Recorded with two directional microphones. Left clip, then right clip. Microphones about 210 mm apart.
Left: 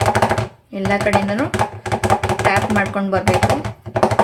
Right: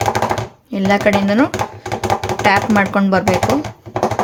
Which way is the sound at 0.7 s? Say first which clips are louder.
Right 3 dB; 45° right (ahead or behind).